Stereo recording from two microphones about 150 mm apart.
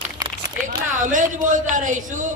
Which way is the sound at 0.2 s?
25° right (ahead or behind).